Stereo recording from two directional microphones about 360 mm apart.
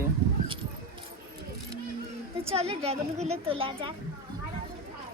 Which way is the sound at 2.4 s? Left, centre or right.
Centre.